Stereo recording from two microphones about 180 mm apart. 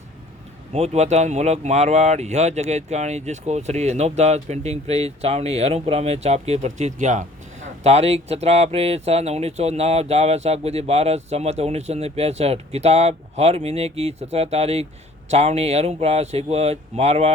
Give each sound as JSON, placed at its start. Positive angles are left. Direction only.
{"t": 0.7, "sound": "speech", "side_deg": -40}